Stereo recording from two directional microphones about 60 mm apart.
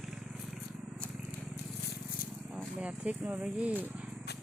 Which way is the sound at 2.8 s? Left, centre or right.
Right.